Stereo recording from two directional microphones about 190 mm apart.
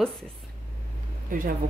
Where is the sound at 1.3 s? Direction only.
45° right (ahead or behind).